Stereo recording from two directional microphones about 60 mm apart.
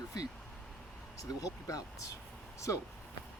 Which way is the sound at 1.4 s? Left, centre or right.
Left.